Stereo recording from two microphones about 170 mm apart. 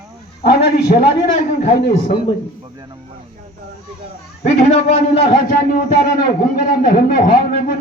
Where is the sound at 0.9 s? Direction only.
55° left (ahead or behind).